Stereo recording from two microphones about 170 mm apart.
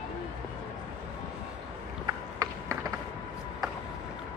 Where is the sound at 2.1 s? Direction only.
20° right (ahead or behind).